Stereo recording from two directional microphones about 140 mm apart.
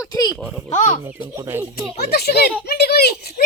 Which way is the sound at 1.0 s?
15° right (ahead or behind).